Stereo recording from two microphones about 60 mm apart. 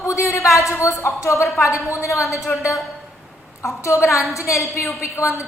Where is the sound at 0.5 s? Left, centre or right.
Left.